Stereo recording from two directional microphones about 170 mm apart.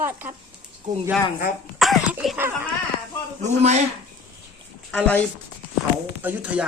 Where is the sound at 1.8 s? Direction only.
Centre (ahead or behind).